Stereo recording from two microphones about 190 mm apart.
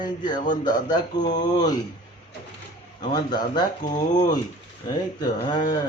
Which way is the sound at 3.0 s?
20° left (ahead or behind).